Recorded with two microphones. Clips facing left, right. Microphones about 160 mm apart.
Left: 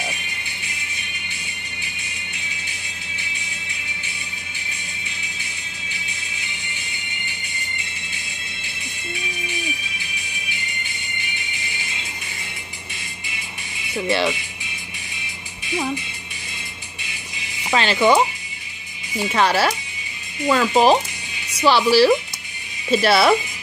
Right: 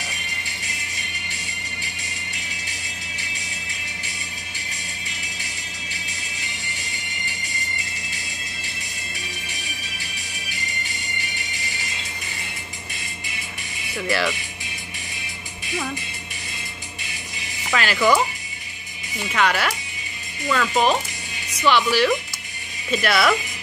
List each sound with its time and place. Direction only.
6.0 s music: 40° right (ahead or behind)
11.1 s music: 40° right (ahead or behind)
13.9 s speech: 25° left (ahead or behind)
17.6 s speech: 25° left (ahead or behind)
19.3 s speech: 30° left (ahead or behind)